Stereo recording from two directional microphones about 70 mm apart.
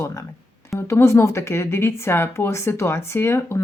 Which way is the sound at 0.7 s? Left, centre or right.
Left.